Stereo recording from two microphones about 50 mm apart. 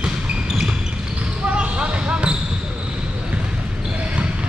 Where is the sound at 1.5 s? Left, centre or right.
Right.